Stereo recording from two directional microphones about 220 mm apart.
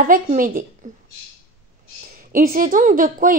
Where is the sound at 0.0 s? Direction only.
35° right (ahead or behind).